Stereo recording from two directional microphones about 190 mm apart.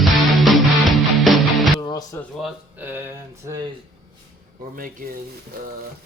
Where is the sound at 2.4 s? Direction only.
5° right (ahead or behind).